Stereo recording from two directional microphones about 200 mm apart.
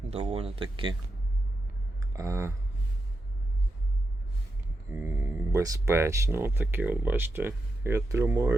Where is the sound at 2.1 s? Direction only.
15° right (ahead or behind).